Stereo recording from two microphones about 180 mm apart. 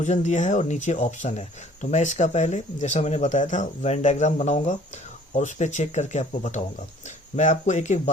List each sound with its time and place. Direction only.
0.0 s speech: 40° left (ahead or behind)